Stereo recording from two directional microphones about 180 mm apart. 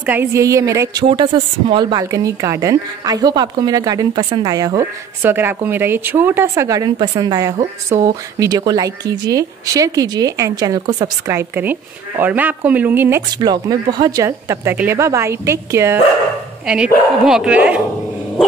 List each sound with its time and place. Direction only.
0.0 s speech: 10° right (ahead or behind)
1.0 s a woman's voice: 30° right (ahead or behind); by 13.2 s 10° right (ahead or behind)
13.4 s speech: 25° right (ahead or behind)
16.6 s speech: 5° right (ahead or behind)